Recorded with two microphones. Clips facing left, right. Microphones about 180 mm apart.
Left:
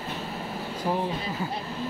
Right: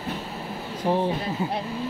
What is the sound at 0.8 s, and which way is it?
Speech, 20° right (ahead or behind).